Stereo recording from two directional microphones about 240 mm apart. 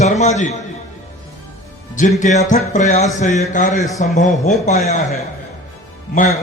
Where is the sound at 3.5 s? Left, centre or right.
Left.